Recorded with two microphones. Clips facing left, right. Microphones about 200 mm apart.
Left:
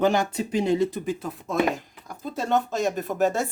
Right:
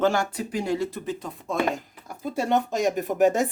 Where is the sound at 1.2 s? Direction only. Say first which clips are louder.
Left 1 dB; centre (ahead or behind).